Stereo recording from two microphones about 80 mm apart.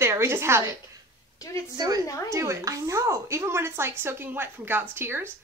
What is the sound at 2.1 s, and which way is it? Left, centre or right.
Speech, left.